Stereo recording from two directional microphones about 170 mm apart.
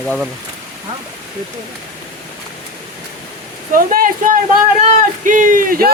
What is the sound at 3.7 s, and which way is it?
Speech, 55° right (ahead or behind).